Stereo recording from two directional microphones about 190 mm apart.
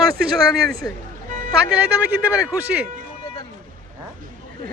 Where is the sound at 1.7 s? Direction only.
5° right (ahead or behind).